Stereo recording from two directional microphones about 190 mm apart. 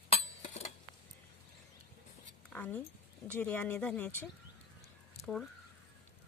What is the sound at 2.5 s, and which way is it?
Speech, 10° left (ahead or behind).